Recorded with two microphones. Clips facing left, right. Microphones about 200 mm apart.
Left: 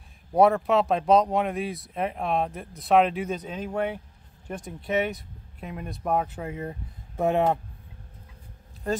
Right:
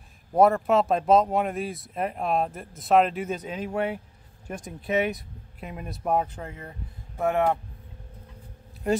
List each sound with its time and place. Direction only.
0.3 s speech: centre (ahead or behind)
7.2 s speech: 20° left (ahead or behind)